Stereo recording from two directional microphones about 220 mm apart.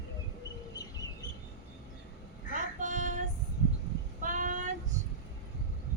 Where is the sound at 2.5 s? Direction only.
35° right (ahead or behind).